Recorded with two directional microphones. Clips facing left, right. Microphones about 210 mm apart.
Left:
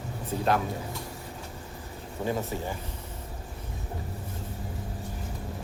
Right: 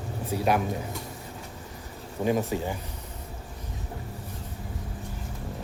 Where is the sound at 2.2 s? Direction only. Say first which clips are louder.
Right 5 dB; 15° right (ahead or behind).